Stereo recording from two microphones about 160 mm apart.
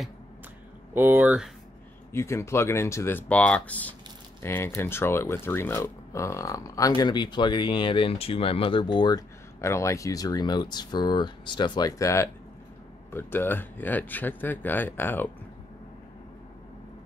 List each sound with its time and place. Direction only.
0.9 s speech: 10° right (ahead or behind)
2.1 s speech: 15° left (ahead or behind)